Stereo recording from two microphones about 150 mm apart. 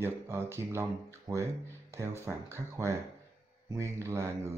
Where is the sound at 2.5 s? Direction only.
20° right (ahead or behind).